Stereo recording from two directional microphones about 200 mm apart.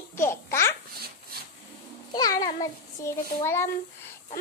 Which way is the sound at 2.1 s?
20° left (ahead or behind).